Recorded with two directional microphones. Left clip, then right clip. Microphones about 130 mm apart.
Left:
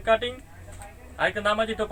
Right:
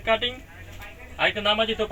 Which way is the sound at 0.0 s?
5° left (ahead or behind).